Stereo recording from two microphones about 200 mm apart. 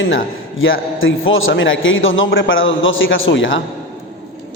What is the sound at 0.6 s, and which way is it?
A man's voice, 80° left.